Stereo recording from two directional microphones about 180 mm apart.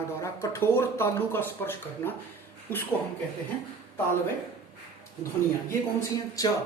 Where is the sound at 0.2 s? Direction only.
15° left (ahead or behind).